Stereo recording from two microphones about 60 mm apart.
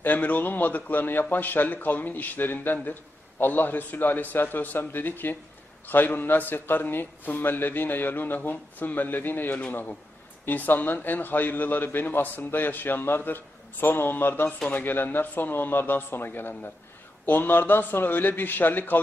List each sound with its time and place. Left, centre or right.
0.0 s a man's voice: left